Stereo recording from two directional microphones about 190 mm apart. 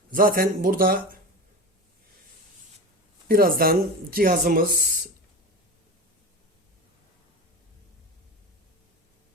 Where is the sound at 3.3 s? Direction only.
50° right (ahead or behind).